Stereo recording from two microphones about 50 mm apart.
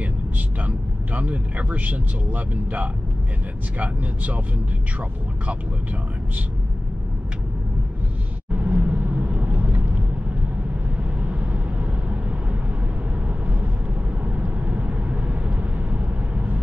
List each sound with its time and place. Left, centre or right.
0.7 s speech: right
8.6 s vehicle: right
11.2 s vehicle: right
14.2 s vehicle: right